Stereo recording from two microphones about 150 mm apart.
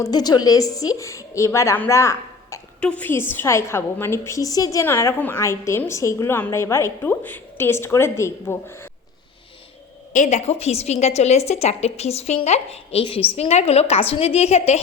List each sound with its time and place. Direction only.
0.0 s a woman's voice: 25° left (ahead or behind)
10.1 s a woman's voice: 50° left (ahead or behind)